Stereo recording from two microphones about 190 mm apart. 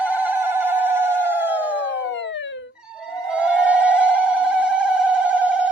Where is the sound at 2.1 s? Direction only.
70° left (ahead or behind).